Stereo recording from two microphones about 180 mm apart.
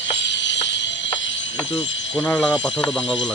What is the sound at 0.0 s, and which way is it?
Music, 85° left.